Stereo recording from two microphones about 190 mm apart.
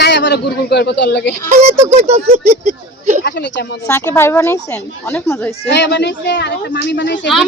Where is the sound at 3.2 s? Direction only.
65° left (ahead or behind).